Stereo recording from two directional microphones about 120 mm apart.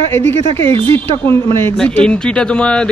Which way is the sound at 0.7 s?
45° right (ahead or behind).